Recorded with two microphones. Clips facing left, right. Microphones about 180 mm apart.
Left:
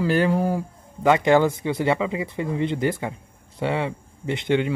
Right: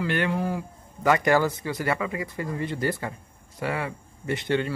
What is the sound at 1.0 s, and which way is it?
Speech, 20° left (ahead or behind).